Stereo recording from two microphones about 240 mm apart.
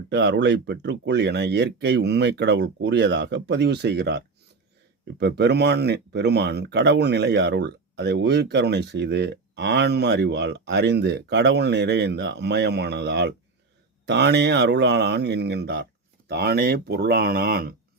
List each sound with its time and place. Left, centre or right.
0.1 s speech: right